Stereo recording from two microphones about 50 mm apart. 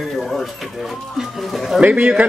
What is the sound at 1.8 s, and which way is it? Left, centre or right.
Speech, right.